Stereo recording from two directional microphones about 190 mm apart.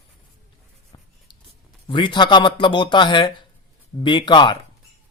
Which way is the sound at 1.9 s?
25° left (ahead or behind).